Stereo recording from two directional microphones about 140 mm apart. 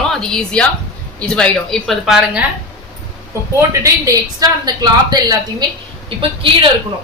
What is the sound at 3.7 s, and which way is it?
A woman's voice, 20° right (ahead or behind).